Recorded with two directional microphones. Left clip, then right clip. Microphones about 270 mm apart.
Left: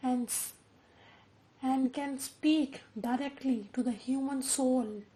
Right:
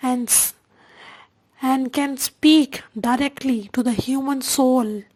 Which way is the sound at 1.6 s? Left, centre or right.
Right.